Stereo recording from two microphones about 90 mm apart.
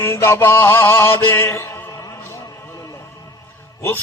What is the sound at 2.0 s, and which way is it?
Music, 35° left (ahead or behind).